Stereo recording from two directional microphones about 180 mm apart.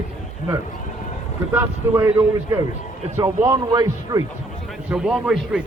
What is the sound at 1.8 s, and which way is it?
Speech, 15° right (ahead or behind).